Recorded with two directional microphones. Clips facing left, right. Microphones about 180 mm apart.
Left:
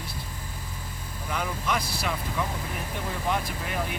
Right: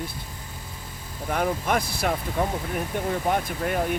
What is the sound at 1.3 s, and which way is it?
Speech, 50° right (ahead or behind).